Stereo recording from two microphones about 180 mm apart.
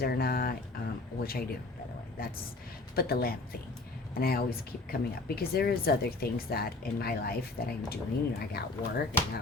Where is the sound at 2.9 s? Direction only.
60° left (ahead or behind).